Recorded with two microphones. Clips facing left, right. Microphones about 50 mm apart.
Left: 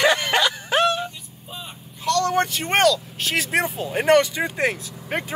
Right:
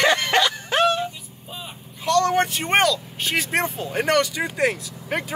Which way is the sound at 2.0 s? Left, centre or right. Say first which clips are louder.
Right 1 dB; right.